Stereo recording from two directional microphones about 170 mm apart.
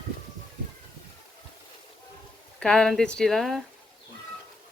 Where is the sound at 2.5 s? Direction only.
5° left (ahead or behind).